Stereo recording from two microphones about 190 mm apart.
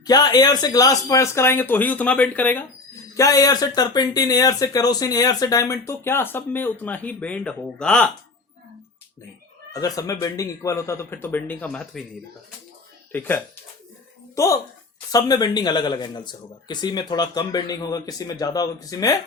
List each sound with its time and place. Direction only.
0.0 s speech: 20° left (ahead or behind); by 8.1 s 5° left (ahead or behind)
9.7 s speech: 20° left (ahead or behind)
13.1 s speech: 10° left (ahead or behind)